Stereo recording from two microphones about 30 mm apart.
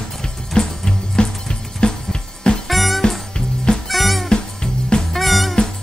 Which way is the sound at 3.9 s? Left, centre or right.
Centre.